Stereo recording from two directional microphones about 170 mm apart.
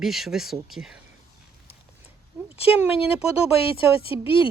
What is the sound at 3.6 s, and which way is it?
Speech, 35° left (ahead or behind).